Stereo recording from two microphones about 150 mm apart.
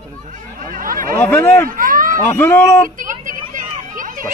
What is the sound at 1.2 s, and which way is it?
Speech, 15° left (ahead or behind).